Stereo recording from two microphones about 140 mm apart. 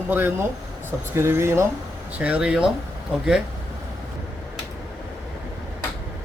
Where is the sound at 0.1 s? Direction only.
15° right (ahead or behind).